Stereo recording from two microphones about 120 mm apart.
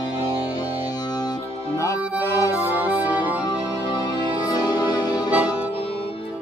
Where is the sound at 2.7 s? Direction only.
15° right (ahead or behind).